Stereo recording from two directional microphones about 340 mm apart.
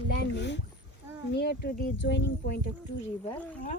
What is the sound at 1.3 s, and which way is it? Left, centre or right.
Speech, left.